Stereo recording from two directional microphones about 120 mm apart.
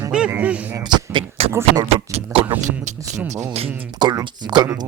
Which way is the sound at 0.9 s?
40° right (ahead or behind).